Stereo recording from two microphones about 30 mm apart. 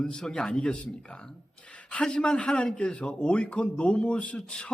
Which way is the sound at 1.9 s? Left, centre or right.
Left.